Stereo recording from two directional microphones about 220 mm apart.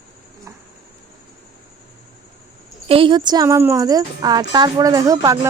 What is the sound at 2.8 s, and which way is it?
Speech, 25° right (ahead or behind).